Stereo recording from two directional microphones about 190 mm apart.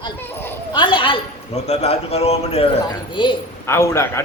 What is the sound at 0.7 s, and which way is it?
A woman's voice, 25° left (ahead or behind).